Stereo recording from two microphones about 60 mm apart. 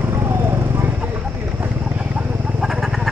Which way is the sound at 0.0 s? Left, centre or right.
Right.